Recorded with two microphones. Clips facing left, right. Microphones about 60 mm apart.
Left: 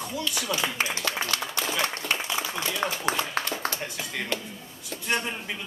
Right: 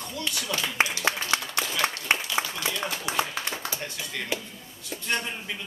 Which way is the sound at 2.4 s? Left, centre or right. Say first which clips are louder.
Right 3 dB; right.